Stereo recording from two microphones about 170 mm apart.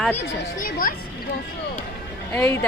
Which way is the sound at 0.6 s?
55° left (ahead or behind).